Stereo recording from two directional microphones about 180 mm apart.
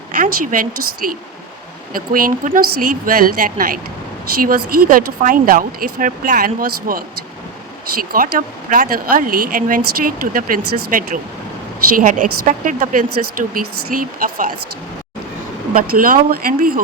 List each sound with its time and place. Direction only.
0.2 s speech: 50° right (ahead or behind)
8.1 s speech: 50° right (ahead or behind)
15.7 s speech: 50° right (ahead or behind)